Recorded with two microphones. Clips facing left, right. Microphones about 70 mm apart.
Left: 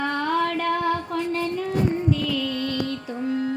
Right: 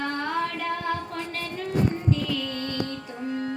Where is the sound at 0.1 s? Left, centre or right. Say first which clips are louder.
Left 5 dB; left.